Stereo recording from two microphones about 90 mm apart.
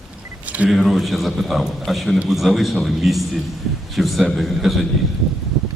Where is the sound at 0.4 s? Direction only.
15° right (ahead or behind).